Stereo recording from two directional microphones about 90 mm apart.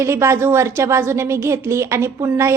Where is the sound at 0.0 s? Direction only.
30° right (ahead or behind).